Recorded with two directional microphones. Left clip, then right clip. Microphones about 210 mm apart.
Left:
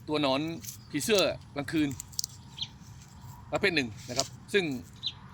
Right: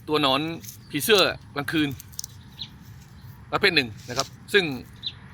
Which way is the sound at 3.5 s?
Centre (ahead or behind).